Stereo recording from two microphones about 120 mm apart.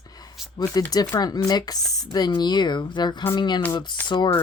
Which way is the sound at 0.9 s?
30° left (ahead or behind).